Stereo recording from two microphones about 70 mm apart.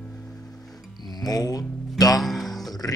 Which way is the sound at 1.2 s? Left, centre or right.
Left.